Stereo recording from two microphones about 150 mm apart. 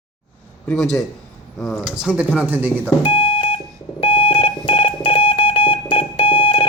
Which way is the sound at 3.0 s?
35° left (ahead or behind).